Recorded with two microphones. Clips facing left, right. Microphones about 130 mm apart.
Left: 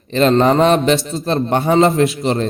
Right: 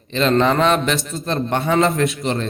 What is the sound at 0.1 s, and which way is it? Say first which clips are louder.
A man's voice: left 4 dB; 40° left (ahead or behind).